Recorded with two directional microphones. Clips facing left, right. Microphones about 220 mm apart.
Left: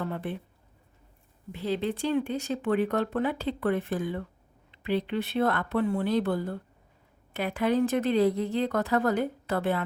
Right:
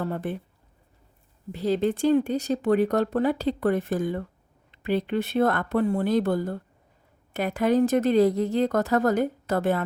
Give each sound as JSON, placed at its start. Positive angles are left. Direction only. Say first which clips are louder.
{"t": 0.0, "sound": "a woman's voice", "louder": "right 4 dB", "side_deg": -45}
{"t": 1.5, "sound": "a woman's voice", "louder": "right 5 dB", "side_deg": -40}